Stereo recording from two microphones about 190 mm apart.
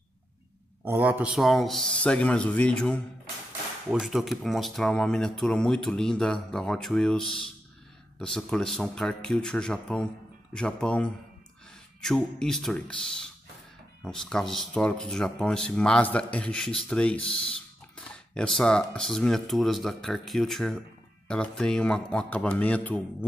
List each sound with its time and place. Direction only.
0.8 s speech: 10° right (ahead or behind); by 23.0 s 5° left (ahead or behind)